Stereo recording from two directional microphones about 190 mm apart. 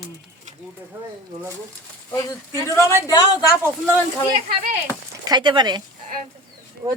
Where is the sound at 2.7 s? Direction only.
15° left (ahead or behind).